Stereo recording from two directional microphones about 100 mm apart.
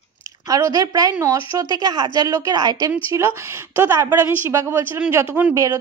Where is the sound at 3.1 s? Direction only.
25° right (ahead or behind).